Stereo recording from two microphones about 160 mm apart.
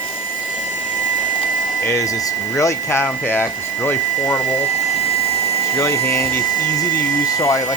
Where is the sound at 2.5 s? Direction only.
15° left (ahead or behind).